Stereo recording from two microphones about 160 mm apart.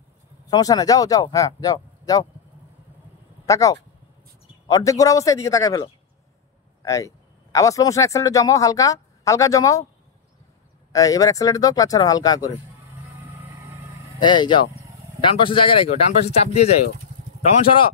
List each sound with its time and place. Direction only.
0.5 s speech: 25° left (ahead or behind)
3.4 s speech: 20° left (ahead or behind)
10.9 s speech: 20° left (ahead or behind)
14.2 s speech: 30° left (ahead or behind)